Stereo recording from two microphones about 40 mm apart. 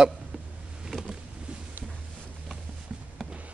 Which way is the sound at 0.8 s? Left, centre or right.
Centre.